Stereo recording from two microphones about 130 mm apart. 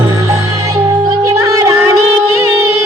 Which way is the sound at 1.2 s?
25° right (ahead or behind).